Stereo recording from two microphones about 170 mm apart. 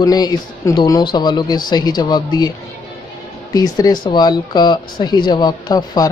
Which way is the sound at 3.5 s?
20° left (ahead or behind).